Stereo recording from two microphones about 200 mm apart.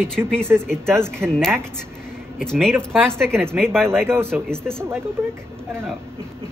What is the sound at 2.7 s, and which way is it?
Speech, 10° right (ahead or behind).